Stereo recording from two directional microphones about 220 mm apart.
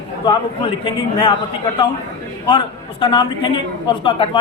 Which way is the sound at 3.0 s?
20° left (ahead or behind).